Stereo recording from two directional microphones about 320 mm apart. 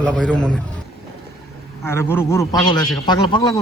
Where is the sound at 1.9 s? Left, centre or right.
Centre.